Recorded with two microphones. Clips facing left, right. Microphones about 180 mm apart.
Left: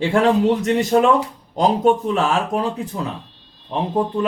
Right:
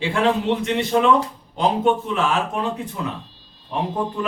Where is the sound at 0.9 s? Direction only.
40° left (ahead or behind).